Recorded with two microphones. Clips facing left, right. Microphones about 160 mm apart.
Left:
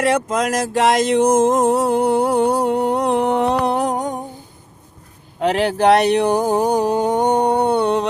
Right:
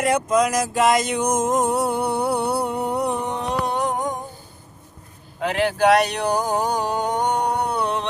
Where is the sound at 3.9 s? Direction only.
35° left (ahead or behind).